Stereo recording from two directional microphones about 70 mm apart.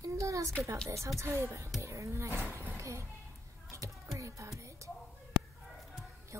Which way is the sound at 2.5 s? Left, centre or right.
Right.